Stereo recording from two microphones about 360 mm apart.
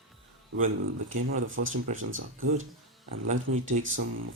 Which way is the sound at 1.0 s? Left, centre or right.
Right.